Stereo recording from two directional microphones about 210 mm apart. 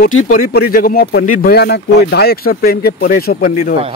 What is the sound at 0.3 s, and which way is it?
Speech, 45° left (ahead or behind).